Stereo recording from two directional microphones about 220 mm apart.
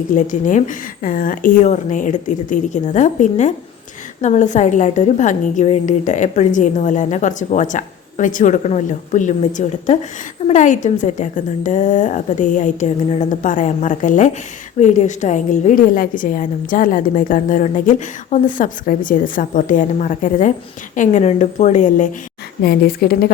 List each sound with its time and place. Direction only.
0.1 s a woman's voice: 35° left (ahead or behind)